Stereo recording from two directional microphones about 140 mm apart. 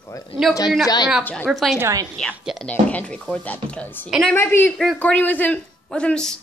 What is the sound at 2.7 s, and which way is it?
Speech, 10° left (ahead or behind).